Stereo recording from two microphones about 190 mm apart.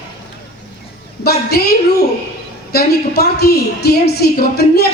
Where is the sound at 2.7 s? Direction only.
55° left (ahead or behind).